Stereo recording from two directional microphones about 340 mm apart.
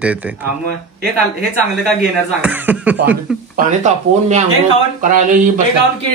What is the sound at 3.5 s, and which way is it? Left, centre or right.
A man's voice, right.